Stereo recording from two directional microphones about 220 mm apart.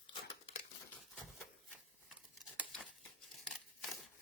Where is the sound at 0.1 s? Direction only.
25° left (ahead or behind).